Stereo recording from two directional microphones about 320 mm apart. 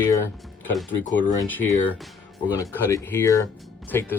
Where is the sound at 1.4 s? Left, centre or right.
Centre.